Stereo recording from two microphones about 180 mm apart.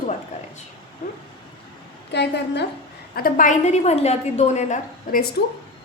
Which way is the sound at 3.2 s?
50° left (ahead or behind).